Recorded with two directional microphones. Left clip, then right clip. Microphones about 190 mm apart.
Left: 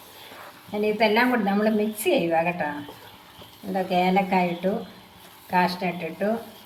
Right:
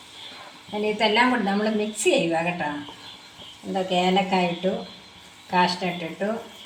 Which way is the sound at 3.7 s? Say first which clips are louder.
Even; 25° right (ahead or behind).